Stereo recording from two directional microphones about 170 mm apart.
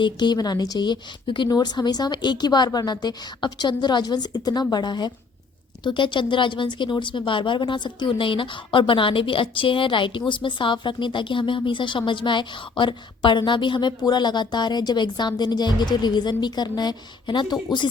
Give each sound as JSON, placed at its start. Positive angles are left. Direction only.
{"t": 0.0, "sound": "a woman's voice", "side_deg": 25}